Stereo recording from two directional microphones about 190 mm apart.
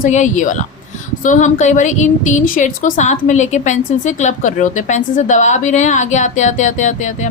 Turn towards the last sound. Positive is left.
turn(degrees=40)  # may be behind; listen again after turning